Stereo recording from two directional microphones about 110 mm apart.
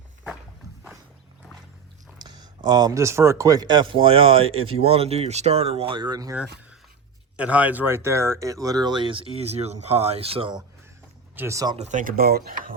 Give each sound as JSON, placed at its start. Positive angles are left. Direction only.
{"t": 2.2, "sound": "speech", "side_deg": -40}
{"t": 6.3, "sound": "speech", "side_deg": -10}
{"t": 9.4, "sound": "speech", "side_deg": -75}
{"t": 11.3, "sound": "speech", "side_deg": -25}